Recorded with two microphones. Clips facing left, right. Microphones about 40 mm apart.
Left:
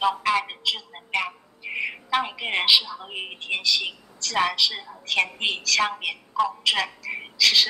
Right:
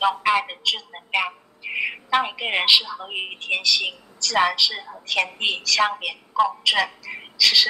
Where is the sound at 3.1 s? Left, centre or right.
Right.